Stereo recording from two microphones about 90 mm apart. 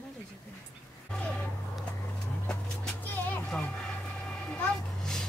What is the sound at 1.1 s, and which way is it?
Vehicle, 15° left (ahead or behind).